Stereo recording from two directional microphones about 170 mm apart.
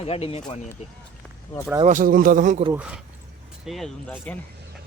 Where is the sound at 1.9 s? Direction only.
50° right (ahead or behind).